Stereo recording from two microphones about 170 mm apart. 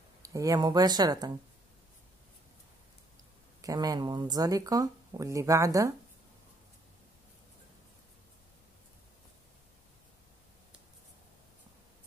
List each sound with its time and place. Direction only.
0.2 s speech: 20° right (ahead or behind)
3.6 s speech: 20° right (ahead or behind)